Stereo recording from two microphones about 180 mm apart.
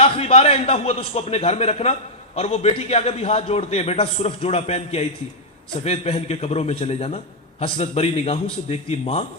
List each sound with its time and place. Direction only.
0.0 s a man's voice: 35° left (ahead or behind)